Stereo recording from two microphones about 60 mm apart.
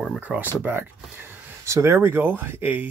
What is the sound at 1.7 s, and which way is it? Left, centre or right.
Speech, right.